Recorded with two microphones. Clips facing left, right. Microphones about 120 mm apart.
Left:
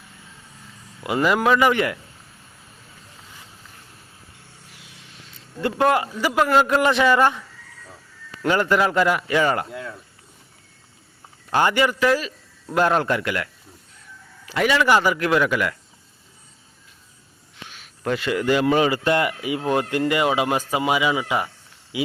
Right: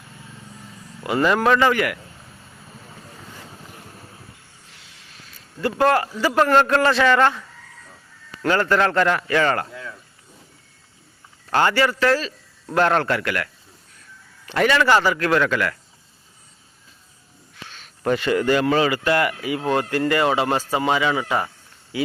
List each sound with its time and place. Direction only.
1.0 s speech: 15° left (ahead or behind)
1.7 s a man's voice: 25° left (ahead or behind)
4.7 s a sound: 20° left (ahead or behind)
6.2 s speech: 10° left (ahead or behind)
11.5 s speech: 15° left (ahead or behind)
14.4 s speech: 5° left (ahead or behind)
17.7 s speech: 5° left (ahead or behind)